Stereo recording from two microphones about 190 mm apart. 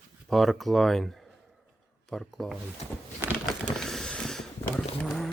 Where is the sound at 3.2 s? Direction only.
15° right (ahead or behind).